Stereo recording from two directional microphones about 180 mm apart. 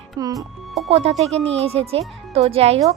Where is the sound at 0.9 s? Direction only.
35° right (ahead or behind).